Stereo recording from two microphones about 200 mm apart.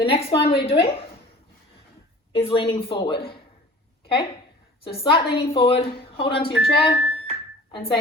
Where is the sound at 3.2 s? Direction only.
50° left (ahead or behind).